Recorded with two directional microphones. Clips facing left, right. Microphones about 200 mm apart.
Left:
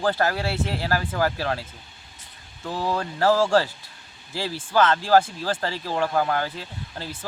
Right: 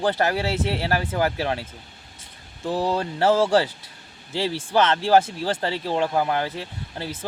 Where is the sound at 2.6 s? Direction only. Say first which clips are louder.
Right 3 dB; 30° right (ahead or behind).